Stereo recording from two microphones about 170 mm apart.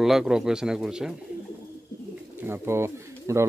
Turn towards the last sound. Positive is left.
turn(degrees=-15)  # may be behind; listen again after turning